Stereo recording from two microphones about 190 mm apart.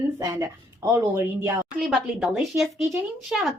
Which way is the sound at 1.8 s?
Centre (ahead or behind).